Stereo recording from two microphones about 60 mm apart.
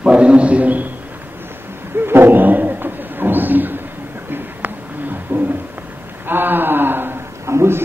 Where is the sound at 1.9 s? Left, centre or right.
Right.